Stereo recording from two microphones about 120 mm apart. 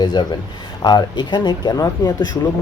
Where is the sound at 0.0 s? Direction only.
40° left (ahead or behind).